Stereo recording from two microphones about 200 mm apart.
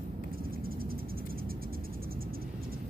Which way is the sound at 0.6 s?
50° right (ahead or behind).